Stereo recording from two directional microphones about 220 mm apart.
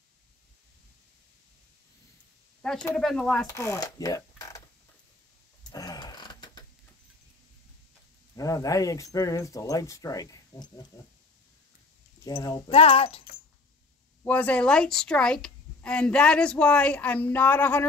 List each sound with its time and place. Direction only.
2.6 s a woman's voice: 5° left (ahead or behind)
3.4 s speech: 15° left (ahead or behind)
5.7 s a sound: 15° left (ahead or behind)
8.4 s speech: 15° left (ahead or behind)
12.3 s a child's voice: 15° left (ahead or behind)
14.2 s a woman's voice: 5° left (ahead or behind)